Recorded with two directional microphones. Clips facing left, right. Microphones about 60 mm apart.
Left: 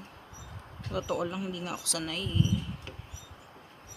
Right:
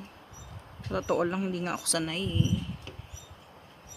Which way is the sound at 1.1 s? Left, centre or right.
Right.